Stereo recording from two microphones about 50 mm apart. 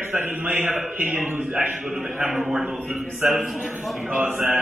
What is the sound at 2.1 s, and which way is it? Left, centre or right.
Speech, right.